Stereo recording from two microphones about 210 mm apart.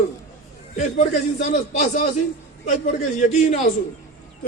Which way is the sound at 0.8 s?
35° left (ahead or behind).